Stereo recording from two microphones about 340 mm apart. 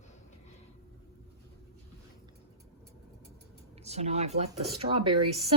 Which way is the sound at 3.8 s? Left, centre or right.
Centre.